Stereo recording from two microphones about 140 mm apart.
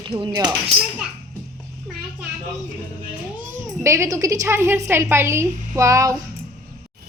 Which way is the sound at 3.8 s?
20° right (ahead or behind).